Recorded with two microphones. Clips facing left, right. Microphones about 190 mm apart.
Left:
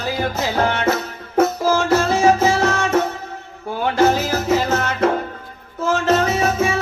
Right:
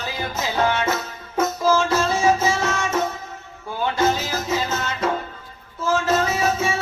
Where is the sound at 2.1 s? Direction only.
35° left (ahead or behind).